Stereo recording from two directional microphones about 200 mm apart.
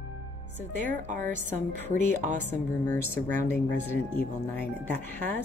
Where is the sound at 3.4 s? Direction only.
10° left (ahead or behind).